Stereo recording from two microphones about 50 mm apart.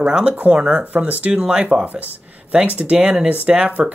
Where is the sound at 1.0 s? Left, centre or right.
Right.